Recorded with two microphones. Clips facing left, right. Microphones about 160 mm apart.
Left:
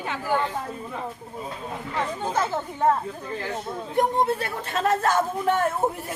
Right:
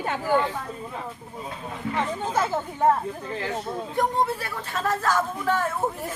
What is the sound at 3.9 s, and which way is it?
A man's voice, 25° left (ahead or behind).